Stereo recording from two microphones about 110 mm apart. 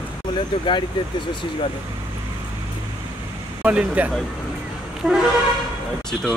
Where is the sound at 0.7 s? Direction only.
45° left (ahead or behind).